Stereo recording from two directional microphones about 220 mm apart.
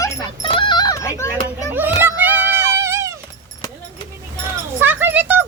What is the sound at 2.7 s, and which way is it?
Dog, 15° right (ahead or behind).